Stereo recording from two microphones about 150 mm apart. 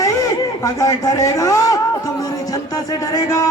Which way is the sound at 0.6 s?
25° left (ahead or behind).